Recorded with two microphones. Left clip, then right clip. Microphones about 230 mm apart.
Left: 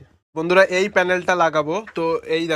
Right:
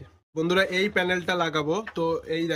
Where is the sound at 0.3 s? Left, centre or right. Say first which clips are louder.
Left 8 dB; centre.